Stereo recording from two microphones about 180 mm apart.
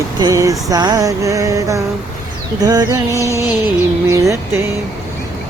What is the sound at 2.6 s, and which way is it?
Music, 20° right (ahead or behind).